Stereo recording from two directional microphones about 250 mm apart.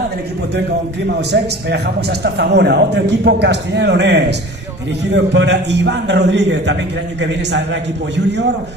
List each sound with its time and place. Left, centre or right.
1.0 s a man's voice: right